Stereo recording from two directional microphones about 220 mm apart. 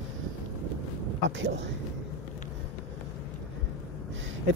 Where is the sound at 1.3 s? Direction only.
55° right (ahead or behind).